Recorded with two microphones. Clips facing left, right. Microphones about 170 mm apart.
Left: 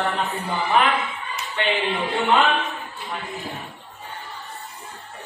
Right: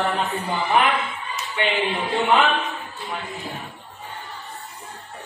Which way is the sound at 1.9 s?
Centre (ahead or behind).